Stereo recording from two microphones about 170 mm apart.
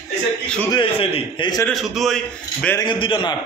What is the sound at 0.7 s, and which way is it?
Speech, 30° left (ahead or behind).